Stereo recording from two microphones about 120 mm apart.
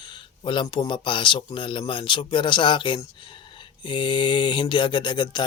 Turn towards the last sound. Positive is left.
turn(degrees=40)  # may be behind; listen again after turning